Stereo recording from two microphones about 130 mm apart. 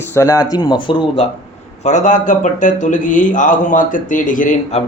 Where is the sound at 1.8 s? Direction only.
70° left (ahead or behind).